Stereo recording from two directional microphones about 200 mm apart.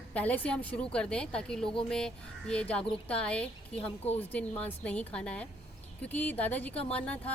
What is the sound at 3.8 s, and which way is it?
Speech, 30° left (ahead or behind).